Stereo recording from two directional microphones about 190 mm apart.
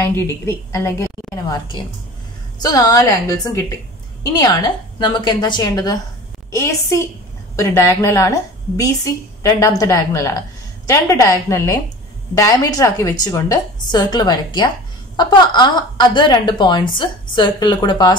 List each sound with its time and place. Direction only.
0.0 s a woman's voice: 15° left (ahead or behind)